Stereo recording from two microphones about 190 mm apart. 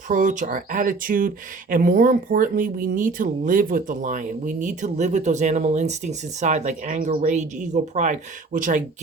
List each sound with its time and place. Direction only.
0.1 s speech: 40° right (ahead or behind)